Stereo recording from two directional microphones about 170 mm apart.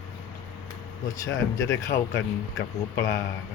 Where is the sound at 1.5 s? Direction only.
15° left (ahead or behind).